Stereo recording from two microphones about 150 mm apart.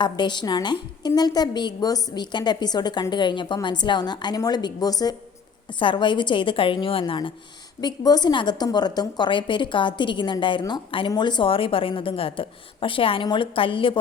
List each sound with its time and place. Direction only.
0.0 s a woman's voice: 30° left (ahead or behind)